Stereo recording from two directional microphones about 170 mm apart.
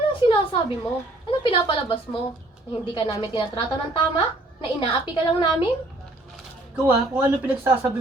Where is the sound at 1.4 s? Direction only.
30° left (ahead or behind).